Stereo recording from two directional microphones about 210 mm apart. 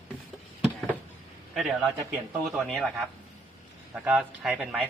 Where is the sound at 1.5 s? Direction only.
Centre (ahead or behind).